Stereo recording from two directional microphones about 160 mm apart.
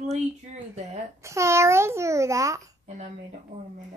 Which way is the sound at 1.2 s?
20° right (ahead or behind).